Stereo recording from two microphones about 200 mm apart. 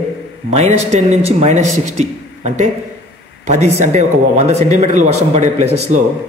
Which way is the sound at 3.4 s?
35° right (ahead or behind).